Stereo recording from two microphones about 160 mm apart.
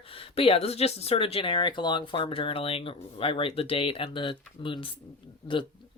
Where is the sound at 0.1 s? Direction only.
35° left (ahead or behind).